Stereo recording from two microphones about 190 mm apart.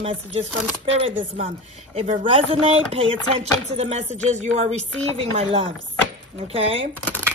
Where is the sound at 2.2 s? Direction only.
30° right (ahead or behind).